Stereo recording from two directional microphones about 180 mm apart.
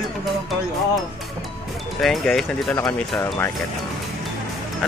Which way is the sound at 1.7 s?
Centre (ahead or behind).